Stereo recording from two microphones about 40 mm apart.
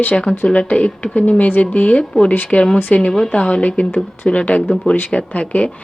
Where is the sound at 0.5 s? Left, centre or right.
Left.